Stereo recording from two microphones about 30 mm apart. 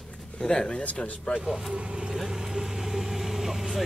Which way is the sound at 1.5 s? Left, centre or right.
Centre.